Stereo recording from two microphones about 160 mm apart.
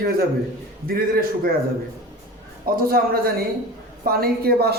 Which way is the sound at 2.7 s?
65° right (ahead or behind).